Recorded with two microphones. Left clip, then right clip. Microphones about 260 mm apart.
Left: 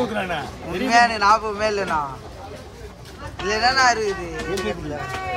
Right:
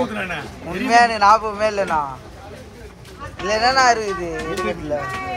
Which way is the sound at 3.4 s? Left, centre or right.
Centre.